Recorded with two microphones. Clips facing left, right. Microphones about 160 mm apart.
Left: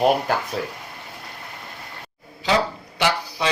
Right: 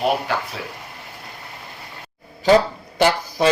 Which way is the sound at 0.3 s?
45° left (ahead or behind).